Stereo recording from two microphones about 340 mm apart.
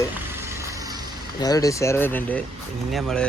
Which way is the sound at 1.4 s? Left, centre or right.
Centre.